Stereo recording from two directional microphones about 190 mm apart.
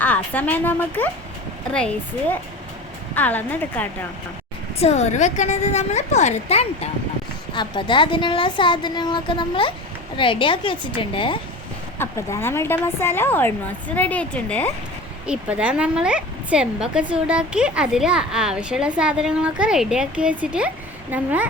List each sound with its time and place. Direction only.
0.0 s a woman's voice: 10° left (ahead or behind)
3.2 s a woman's voice: 10° left (ahead or behind)
4.8 s a woman's voice: 35° left (ahead or behind)
7.5 s a woman's voice: 25° left (ahead or behind)
11.9 s a woman's voice: 15° left (ahead or behind)
15.3 s speech: 5° right (ahead or behind)